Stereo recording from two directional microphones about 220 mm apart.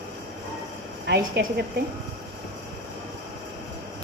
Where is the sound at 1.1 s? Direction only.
50° right (ahead or behind).